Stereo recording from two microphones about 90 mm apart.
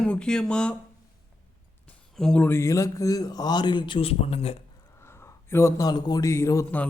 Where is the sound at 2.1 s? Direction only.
5° left (ahead or behind).